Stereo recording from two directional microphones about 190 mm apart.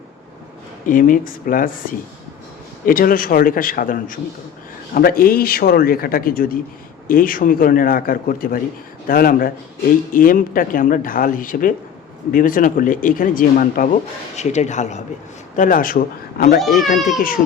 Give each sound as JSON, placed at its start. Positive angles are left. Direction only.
{"t": 0.9, "sound": "speech", "side_deg": 45}
{"t": 16.6, "sound": "speech", "side_deg": 0}
{"t": 17.2, "sound": "speech", "side_deg": 50}